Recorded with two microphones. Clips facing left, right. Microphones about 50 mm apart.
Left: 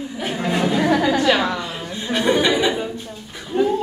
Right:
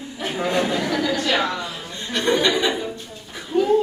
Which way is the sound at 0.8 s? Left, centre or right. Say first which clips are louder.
Left 5 dB; left.